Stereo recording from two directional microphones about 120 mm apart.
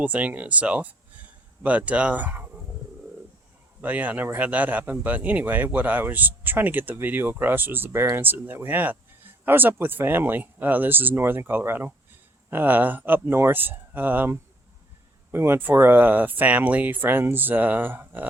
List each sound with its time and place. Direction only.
0.0 s speech: 10° right (ahead or behind)
3.8 s speech: 15° right (ahead or behind)